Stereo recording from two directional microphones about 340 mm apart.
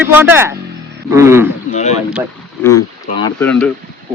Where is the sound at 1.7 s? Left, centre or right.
Centre.